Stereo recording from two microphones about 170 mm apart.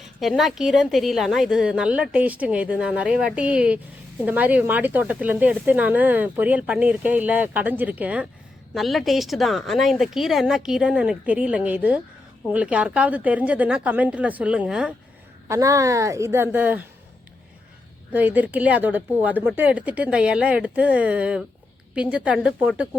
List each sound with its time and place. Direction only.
0.2 s a woman's voice: centre (ahead or behind)
15.4 s speech: 20° right (ahead or behind)
18.1 s speech: 10° right (ahead or behind)